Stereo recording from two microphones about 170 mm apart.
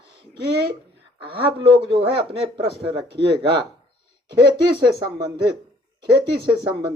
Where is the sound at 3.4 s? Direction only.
30° right (ahead or behind).